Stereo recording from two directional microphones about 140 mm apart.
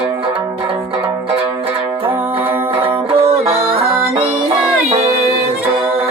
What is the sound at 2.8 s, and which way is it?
Music, 45° right (ahead or behind).